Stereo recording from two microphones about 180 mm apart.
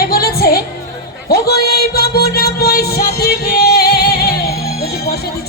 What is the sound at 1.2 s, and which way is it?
Music, 60° left (ahead or behind).